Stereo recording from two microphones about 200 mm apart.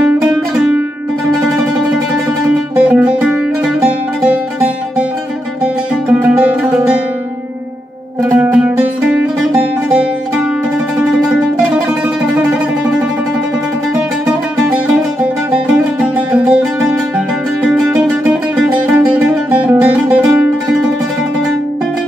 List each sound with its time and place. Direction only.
2.7 s music: 5° right (ahead or behind)
6.0 s music: 5° right (ahead or behind)
8.3 s music: 10° right (ahead or behind)
11.0 s music: 5° right (ahead or behind)
14.2 s music: 5° right (ahead or behind)
18.6 s music: 5° right (ahead or behind)